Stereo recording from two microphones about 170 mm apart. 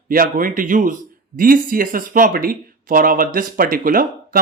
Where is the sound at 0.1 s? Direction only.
55° right (ahead or behind).